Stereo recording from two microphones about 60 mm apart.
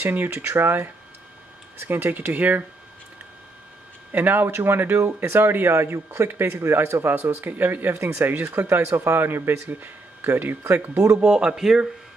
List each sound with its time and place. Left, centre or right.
0.1 s speech: right
1.9 s speech: right
4.1 s speech: right
7.9 s speech: right
11.1 s speech: right
11.5 s speech: centre